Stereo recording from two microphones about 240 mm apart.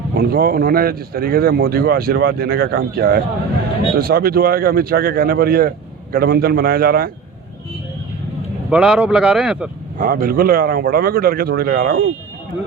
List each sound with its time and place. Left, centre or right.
0.1 s a man's voice: right
8.7 s speech: centre
10.0 s a man's voice: right